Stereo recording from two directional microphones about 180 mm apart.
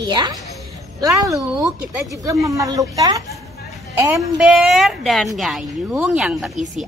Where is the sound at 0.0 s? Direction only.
25° right (ahead or behind).